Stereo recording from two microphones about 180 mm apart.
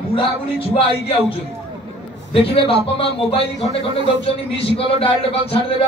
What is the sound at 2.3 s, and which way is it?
Speech, 30° left (ahead or behind).